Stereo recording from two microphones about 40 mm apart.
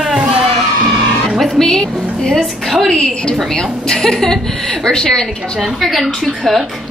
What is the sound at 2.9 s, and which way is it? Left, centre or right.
A woman's voice, left.